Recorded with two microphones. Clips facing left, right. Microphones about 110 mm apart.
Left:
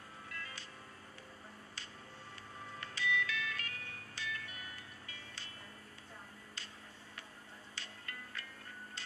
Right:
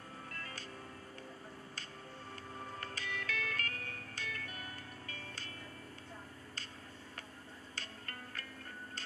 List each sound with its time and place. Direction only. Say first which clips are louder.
0.3 s music: left 1 dB; 45° right (ahead or behind)
2.8 s music: left 10 dB; 40° right (ahead or behind)
7.7 s music: right 1 dB; 40° right (ahead or behind)